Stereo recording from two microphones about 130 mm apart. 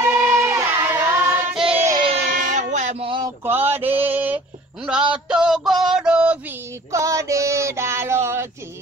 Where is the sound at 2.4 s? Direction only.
70° right (ahead or behind).